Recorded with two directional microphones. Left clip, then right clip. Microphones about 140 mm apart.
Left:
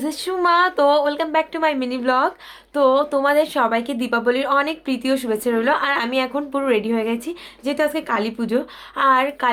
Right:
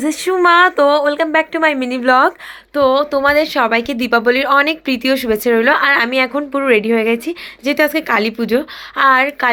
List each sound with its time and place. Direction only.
0.3 s speech: 40° right (ahead or behind)
2.7 s speech: 20° right (ahead or behind)